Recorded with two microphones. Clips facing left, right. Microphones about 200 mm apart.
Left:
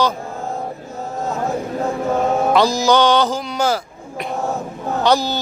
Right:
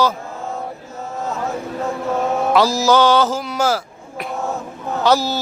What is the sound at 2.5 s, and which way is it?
Mantra, 5° right (ahead or behind).